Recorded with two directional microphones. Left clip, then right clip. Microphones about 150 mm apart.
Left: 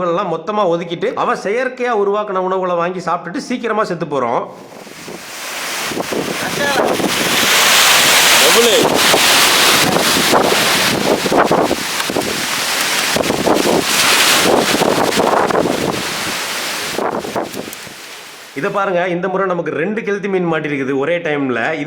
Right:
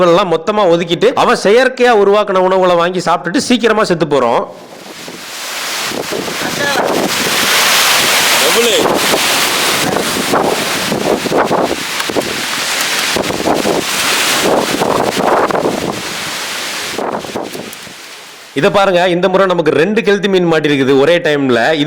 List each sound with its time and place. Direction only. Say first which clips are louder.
0.0 s a man's voice: right 7 dB; 40° right (ahead or behind)
6.1 s wind noise: right 1 dB; centre (ahead or behind)
18.6 s a man's voice: right 6 dB; 40° right (ahead or behind)